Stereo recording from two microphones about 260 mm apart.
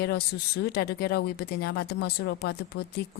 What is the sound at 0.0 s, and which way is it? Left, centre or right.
A woman's voice, left.